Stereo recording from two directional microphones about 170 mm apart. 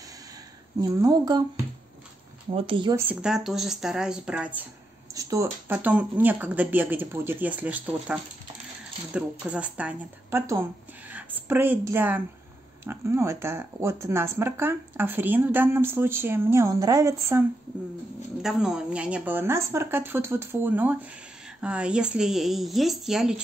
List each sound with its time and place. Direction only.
0.7 s speech: 20° right (ahead or behind)
2.5 s speech: 30° right (ahead or behind)
3.0 s a woman's voice: 10° right (ahead or behind)
18.4 s speech: 5° right (ahead or behind)